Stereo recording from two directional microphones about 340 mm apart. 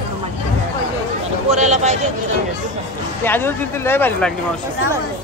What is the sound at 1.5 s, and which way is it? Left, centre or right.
Speech, centre.